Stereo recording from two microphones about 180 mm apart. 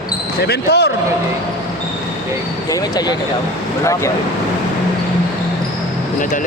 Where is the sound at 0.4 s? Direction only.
65° left (ahead or behind).